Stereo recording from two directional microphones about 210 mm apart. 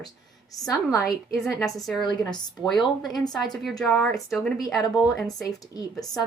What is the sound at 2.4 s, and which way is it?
Speech, 20° left (ahead or behind).